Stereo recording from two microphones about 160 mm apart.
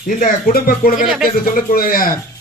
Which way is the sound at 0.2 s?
60° left (ahead or behind).